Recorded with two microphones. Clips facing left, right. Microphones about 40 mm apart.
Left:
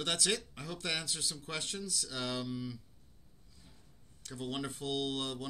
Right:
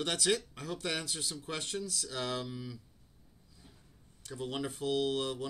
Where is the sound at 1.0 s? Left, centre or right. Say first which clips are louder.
Right 1 dB; centre.